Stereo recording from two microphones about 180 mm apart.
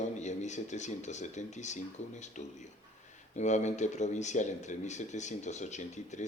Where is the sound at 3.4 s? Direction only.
40° left (ahead or behind).